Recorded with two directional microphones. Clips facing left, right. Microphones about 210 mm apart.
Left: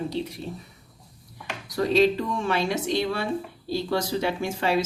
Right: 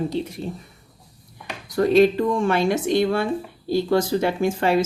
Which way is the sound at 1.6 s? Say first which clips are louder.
Right 5 dB; 50° right (ahead or behind).